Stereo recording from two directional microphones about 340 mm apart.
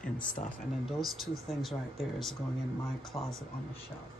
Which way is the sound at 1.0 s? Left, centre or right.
Centre.